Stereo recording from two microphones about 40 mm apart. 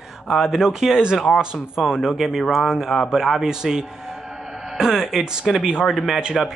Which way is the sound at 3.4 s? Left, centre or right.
Centre.